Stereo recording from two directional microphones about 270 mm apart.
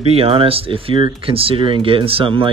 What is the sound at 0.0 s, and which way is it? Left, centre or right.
Speech, right.